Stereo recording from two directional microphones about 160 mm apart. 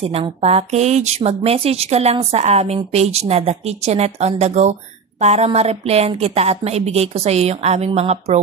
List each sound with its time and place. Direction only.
0.0 s a woman's voice: 35° right (ahead or behind)